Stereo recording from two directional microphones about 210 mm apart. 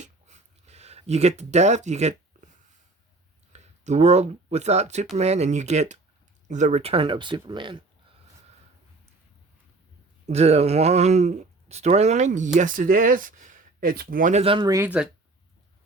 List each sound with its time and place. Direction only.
0.0 s a sound: 35° right (ahead or behind)
3.5 s speech: 30° right (ahead or behind)
10.2 s speech: 30° right (ahead or behind); by 15.1 s 5° right (ahead or behind)